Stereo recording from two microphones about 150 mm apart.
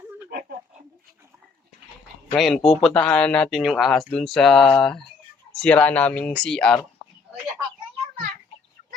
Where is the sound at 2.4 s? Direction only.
Centre (ahead or behind).